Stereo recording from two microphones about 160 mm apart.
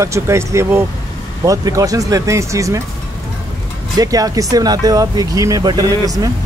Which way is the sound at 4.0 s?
20° right (ahead or behind).